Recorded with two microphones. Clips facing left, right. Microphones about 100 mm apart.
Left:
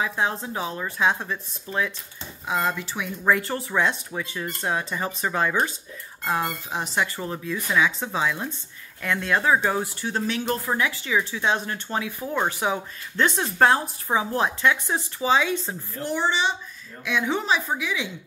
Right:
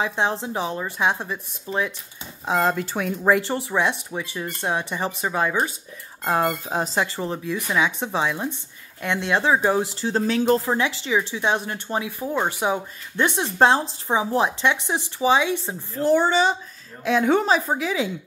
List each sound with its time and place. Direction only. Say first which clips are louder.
0.0 s speech: right 2 dB; 25° right (ahead or behind)
2.4 s speech: right 4 dB; 30° right (ahead or behind)
2.7 s speech: right 5 dB; 45° right (ahead or behind)
3.3 s speech: right 2 dB; 20° right (ahead or behind)
6.2 s speech: right 4 dB; 35° right (ahead or behind)
7.2 s speech: right 3 dB; 20° right (ahead or behind); by 10.6 s 35° right (ahead or behind)
10.6 s speech: right 2 dB; 25° right (ahead or behind)
16.0 s speech: right 7 dB; 40° right (ahead or behind)